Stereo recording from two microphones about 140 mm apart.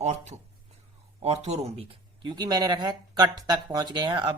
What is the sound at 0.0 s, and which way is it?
Speech, 55° right (ahead or behind).